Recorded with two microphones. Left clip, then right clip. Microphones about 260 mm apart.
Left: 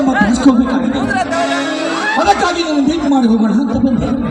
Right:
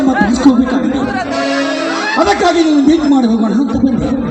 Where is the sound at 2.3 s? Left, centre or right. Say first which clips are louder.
Right 3 dB; right.